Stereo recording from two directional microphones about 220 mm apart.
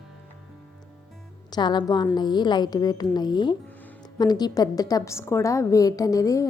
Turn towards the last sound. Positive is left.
turn(degrees=15)  # may be behind; listen again after turning